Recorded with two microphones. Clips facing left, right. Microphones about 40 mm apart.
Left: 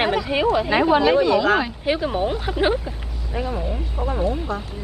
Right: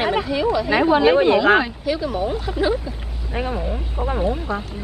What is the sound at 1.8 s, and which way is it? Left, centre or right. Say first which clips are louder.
Speech: left 1 dB; left.